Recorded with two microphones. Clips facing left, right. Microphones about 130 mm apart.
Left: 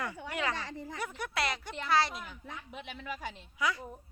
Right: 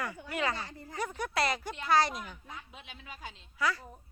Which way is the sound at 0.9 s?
35° right (ahead or behind).